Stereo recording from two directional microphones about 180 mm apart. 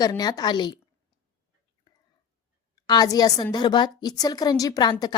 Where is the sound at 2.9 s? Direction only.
20° left (ahead or behind).